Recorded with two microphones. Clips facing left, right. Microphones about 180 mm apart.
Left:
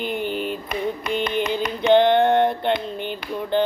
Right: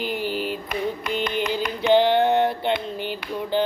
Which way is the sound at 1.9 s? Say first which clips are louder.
Left 2 dB; 5° right (ahead or behind).